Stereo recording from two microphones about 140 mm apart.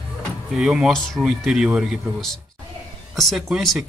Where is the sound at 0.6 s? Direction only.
5° right (ahead or behind).